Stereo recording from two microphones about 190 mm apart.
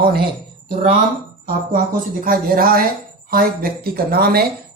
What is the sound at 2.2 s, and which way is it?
A man's voice, 50° right (ahead or behind).